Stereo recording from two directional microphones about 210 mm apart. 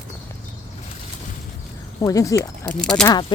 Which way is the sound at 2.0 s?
15° left (ahead or behind).